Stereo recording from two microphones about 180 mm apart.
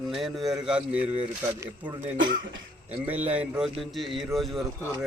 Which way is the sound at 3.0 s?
10° right (ahead or behind).